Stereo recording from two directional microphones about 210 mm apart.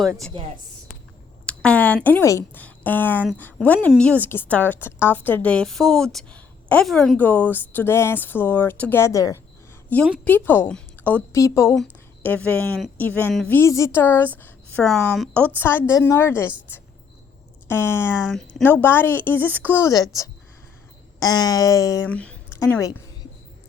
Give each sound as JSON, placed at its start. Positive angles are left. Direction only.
{"t": 0.0, "sound": "a woman's voice", "side_deg": 0}
{"t": 1.5, "sound": "a woman's voice", "side_deg": 5}
{"t": 17.7, "sound": "a woman's voice", "side_deg": 10}